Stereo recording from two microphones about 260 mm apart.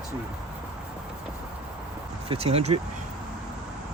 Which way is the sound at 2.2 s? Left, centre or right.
Right.